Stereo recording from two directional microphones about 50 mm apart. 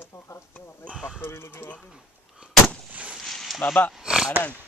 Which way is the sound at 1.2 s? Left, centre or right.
Left.